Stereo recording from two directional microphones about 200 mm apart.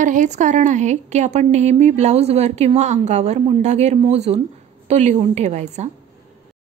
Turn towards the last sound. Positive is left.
turn(degrees=-35)  # may be behind; listen again after turning